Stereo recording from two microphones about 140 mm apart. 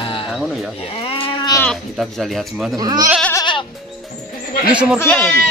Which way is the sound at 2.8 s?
25° right (ahead or behind).